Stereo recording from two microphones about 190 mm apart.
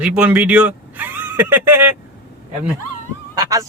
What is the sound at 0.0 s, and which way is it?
Speech, 5° right (ahead or behind).